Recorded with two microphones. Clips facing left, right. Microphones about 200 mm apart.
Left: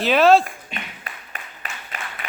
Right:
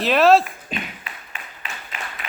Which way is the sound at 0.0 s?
Centre (ahead or behind).